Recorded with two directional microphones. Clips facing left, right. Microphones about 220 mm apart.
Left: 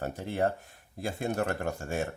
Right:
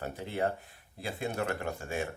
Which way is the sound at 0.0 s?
45° left (ahead or behind).